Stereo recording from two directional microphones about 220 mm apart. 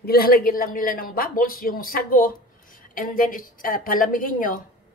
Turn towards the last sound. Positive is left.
turn(degrees=35)  # may be behind; listen again after turning